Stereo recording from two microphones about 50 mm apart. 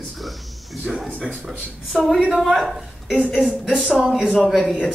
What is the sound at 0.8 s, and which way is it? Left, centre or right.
A man's voice, centre.